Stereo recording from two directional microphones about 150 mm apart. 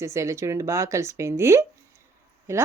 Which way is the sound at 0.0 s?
20° right (ahead or behind).